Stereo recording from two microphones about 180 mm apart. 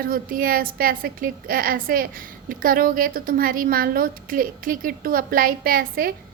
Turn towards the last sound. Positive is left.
turn(degrees=-55)  # may be behind; listen again after turning